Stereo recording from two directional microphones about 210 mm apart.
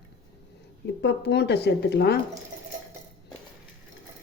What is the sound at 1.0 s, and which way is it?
A woman's voice, 55° left (ahead or behind).